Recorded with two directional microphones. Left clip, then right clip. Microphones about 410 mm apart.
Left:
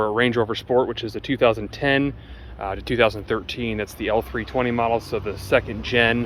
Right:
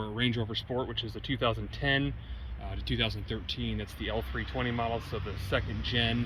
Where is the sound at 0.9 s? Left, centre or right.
Centre.